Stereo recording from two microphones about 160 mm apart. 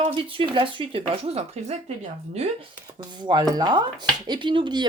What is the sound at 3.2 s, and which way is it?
Speech, 25° right (ahead or behind).